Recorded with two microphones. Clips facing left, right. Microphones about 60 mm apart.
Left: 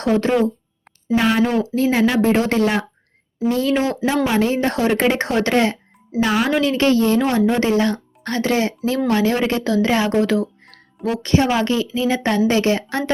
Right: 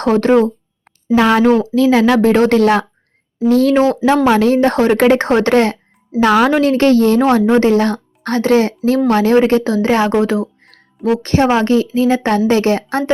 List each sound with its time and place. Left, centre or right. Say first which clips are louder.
0.0 s a woman's voice: right 5 dB; right
1.1 s a woman's voice: right 6 dB; right
10.2 s speech: right 3 dB; right
11.2 s speech: right 2 dB; right